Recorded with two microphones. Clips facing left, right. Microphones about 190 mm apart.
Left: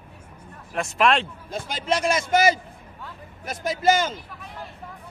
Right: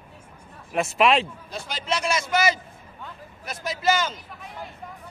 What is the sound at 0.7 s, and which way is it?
Speech, 5° right (ahead or behind).